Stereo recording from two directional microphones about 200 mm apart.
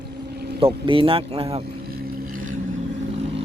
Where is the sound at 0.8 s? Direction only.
25° right (ahead or behind).